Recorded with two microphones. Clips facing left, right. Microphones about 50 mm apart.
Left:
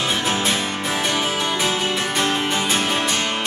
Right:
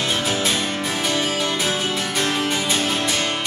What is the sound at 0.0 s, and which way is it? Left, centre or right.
Music, centre.